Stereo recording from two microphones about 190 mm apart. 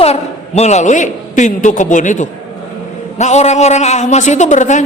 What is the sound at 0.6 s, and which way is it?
A man's voice, 35° left (ahead or behind).